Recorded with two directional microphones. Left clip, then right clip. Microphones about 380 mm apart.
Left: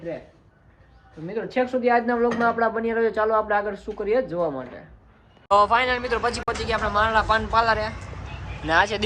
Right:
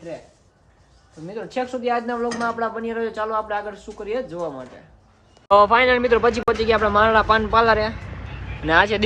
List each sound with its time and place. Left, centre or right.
1.3 s speech: centre